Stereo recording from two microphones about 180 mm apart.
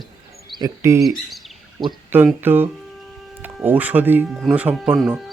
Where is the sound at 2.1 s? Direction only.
10° right (ahead or behind).